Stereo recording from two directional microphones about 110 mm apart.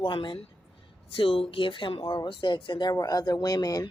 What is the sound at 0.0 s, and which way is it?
Speech, 45° left (ahead or behind).